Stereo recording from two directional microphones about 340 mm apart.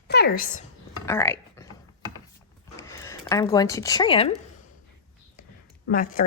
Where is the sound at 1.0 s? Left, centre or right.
Centre.